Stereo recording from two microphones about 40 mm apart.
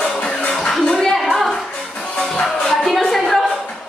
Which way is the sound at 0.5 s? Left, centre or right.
Centre.